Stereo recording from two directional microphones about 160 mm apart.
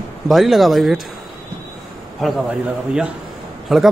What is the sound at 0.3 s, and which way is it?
Speech, centre (ahead or behind).